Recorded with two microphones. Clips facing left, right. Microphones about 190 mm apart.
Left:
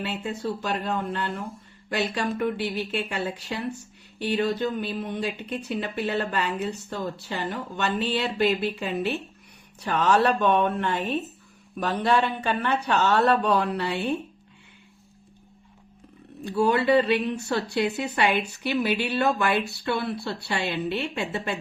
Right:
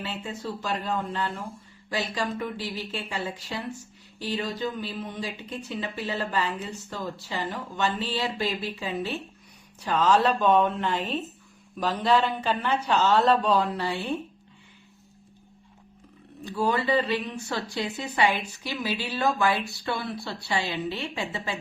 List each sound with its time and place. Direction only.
0.0 s speech: 65° left (ahead or behind)
16.4 s speech: 65° left (ahead or behind)